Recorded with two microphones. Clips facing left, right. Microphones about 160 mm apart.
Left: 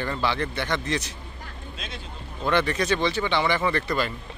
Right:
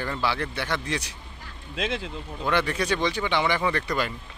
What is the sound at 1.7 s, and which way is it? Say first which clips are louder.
Speech: right 12 dB; 90° right.